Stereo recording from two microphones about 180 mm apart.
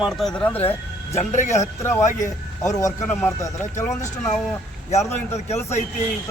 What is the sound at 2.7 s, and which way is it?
Speech, 20° left (ahead or behind).